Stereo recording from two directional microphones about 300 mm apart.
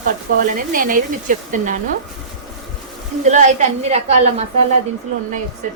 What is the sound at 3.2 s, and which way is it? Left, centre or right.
Speech, right.